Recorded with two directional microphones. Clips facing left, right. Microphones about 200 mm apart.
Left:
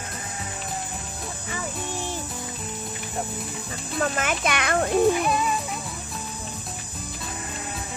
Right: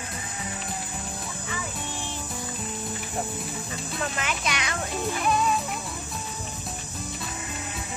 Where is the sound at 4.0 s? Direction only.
50° left (ahead or behind).